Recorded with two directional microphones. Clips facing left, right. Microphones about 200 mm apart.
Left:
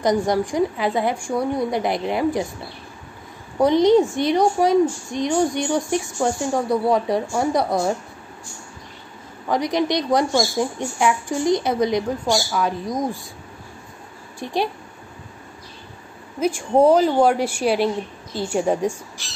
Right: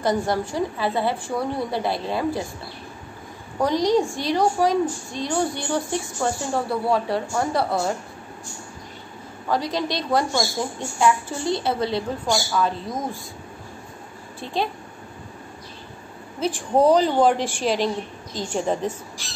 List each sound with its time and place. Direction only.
0.0 s a woman's voice: 15° left (ahead or behind)
3.6 s a woman's voice: 20° left (ahead or behind)
9.5 s a woman's voice: 20° left (ahead or behind)
14.4 s a woman's voice: 15° left (ahead or behind)
16.3 s a woman's voice: 10° left (ahead or behind)